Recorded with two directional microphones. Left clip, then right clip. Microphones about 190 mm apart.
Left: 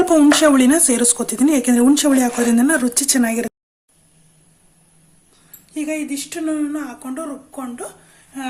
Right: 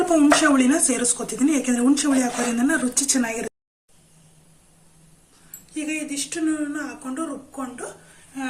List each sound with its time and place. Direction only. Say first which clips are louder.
0.0 s speech: left 5 dB; 60° left (ahead or behind)
5.9 s speech: left 3 dB; 50° left (ahead or behind)